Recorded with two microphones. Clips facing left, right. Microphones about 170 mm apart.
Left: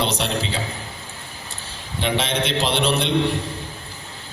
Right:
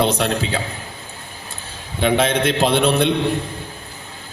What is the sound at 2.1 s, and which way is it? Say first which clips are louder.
Speech: right 5 dB; 55° right (ahead or behind).